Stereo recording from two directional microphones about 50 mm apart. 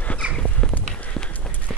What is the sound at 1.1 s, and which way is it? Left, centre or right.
Run, centre.